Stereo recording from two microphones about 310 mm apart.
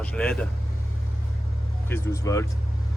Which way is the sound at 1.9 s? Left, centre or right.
Centre.